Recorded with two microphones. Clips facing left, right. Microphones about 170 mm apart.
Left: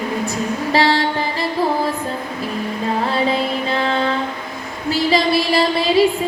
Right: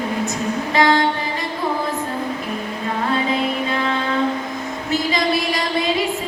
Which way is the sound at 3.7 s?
30° left (ahead or behind).